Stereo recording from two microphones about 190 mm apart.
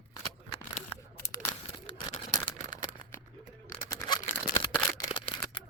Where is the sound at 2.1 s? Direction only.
30° left (ahead or behind).